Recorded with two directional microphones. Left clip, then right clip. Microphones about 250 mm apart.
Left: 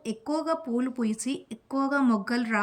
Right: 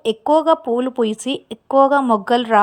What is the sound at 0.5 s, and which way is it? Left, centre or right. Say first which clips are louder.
Speech: right 12 dB; right.